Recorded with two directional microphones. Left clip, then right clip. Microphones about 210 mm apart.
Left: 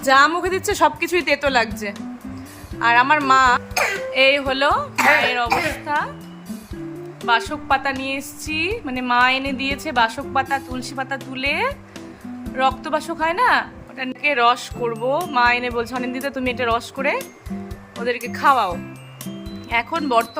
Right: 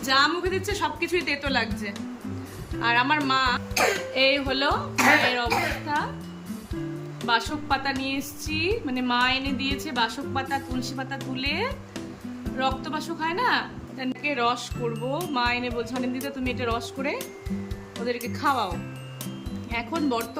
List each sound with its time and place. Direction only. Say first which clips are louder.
0.0 s a woman's voice: left 7 dB; 15° left (ahead or behind)
7.3 s a woman's voice: left 6 dB; 15° left (ahead or behind)
20.0 s a woman's voice: left 8 dB; 15° left (ahead or behind)